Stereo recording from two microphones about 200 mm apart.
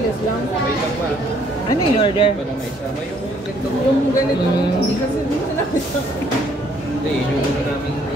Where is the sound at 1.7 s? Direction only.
25° left (ahead or behind).